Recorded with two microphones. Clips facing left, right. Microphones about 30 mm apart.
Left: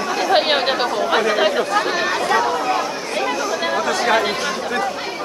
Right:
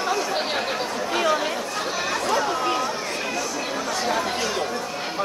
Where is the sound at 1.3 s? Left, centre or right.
Left.